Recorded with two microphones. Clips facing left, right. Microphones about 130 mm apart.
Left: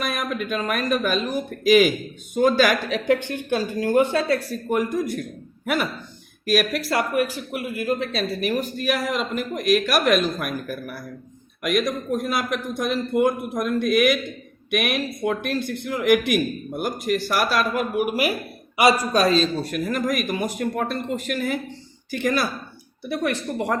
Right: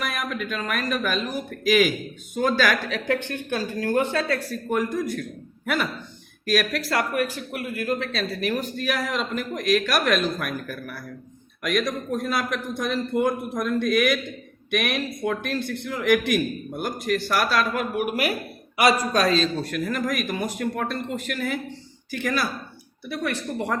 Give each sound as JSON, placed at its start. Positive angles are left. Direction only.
{"t": 0.0, "sound": "a man's voice", "side_deg": 20}